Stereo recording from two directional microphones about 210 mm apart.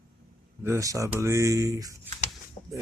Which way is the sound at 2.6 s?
30° left (ahead or behind).